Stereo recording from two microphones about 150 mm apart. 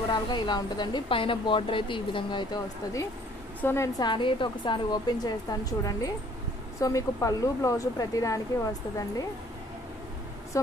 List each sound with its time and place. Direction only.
0.1 s speech: 30° left (ahead or behind)
4.0 s a woman's voice: 35° left (ahead or behind)
10.5 s speech: 20° left (ahead or behind)